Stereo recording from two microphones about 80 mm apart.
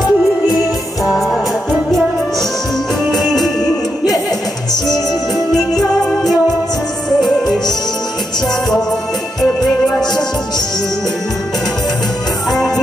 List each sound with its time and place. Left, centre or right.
0.0 s music: centre
3.1 s music: centre
5.5 s music: centre
7.2 s music: left
9.4 s music: centre
12.4 s music: centre